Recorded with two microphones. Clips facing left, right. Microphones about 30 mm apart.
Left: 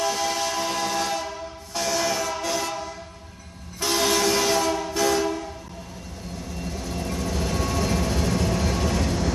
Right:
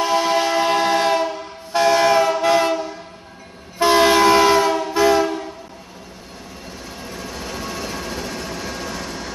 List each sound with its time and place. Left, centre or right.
0.0 s train: right
6.6 s vehicle: centre